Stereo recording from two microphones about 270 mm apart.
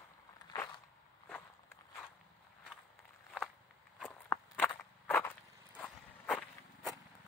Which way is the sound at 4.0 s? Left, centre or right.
Centre.